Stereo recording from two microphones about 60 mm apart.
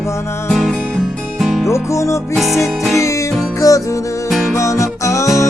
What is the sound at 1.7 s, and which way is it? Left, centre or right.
Music, left.